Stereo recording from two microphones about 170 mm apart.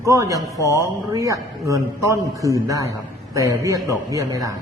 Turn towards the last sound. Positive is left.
turn(degrees=-20)  # may be behind; listen again after turning